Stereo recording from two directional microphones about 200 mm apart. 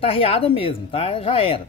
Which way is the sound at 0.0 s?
30° left (ahead or behind).